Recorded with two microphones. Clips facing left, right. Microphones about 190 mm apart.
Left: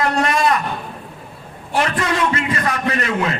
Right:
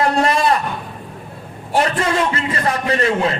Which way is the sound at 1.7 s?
30° right (ahead or behind).